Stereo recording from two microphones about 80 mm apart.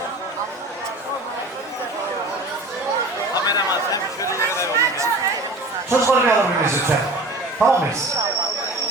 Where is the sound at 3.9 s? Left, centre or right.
Left.